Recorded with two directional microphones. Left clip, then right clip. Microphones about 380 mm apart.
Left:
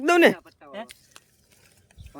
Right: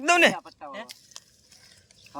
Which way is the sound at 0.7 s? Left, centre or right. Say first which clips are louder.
Left 6 dB; centre.